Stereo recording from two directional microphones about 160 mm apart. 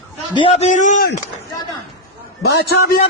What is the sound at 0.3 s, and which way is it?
Speech, 40° left (ahead or behind).